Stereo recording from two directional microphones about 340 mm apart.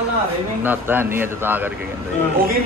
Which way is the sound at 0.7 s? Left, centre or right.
Centre.